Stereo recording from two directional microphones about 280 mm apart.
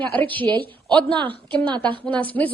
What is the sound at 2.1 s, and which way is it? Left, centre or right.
Speech, centre.